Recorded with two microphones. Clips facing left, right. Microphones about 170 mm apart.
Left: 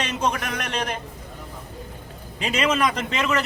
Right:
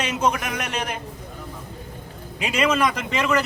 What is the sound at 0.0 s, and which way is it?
Speech, 5° right (ahead or behind).